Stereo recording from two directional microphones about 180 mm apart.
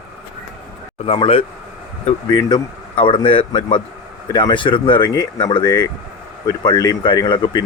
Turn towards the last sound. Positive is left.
turn(degrees=25)  # may be behind; listen again after turning